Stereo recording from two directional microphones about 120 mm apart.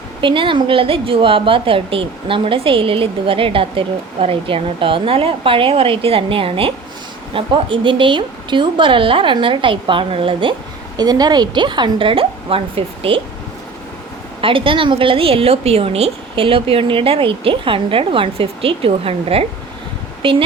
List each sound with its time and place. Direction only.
0.2 s a woman's voice: 45° right (ahead or behind)
10.9 s a woman's voice: 35° right (ahead or behind)
14.4 s a woman's voice: 45° right (ahead or behind)